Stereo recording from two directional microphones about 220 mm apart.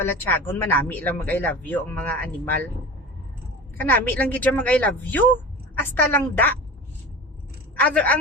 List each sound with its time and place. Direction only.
0.0 s a woman's voice: 10° left (ahead or behind)
3.8 s a woman's voice: 10° left (ahead or behind)
7.8 s a woman's voice: 5° left (ahead or behind)